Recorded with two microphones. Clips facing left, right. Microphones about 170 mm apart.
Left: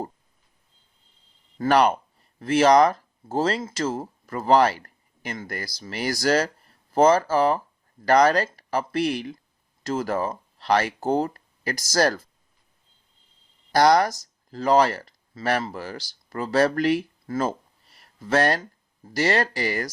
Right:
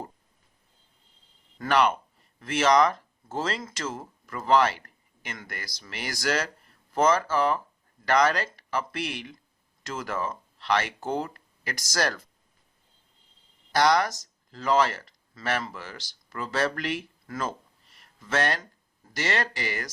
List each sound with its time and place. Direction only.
1.5 s speech: 40° left (ahead or behind)
13.7 s speech: 35° left (ahead or behind)